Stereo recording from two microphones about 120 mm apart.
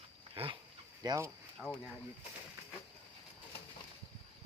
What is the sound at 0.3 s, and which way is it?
Dog, 45° right (ahead or behind).